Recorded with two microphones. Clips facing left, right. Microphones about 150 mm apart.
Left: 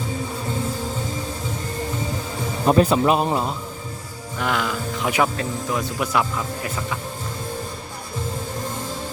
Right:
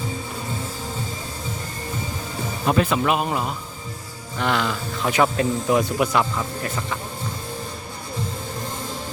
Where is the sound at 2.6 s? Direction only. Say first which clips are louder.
Left 4 dB; 35° left (ahead or behind).